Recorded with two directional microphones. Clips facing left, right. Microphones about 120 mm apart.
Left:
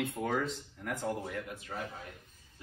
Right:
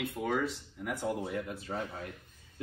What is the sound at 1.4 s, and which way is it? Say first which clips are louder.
Speech: right 4 dB; 35° right (ahead or behind).